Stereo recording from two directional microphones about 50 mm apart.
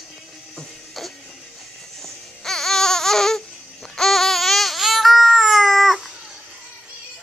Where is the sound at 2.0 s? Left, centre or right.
Centre.